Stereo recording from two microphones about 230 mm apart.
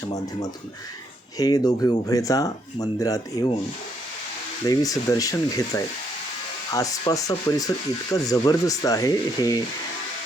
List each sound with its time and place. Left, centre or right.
1.4 s speech: centre
4.6 s speech: centre